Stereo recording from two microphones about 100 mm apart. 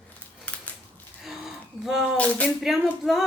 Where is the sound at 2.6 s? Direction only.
5° right (ahead or behind).